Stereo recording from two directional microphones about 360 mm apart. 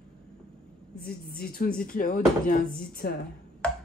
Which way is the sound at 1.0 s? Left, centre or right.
Left.